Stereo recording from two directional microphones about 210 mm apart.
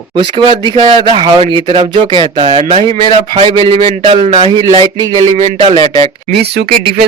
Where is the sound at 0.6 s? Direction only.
20° right (ahead or behind).